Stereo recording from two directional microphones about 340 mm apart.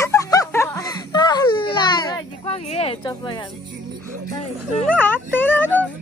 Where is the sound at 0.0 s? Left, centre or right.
Centre.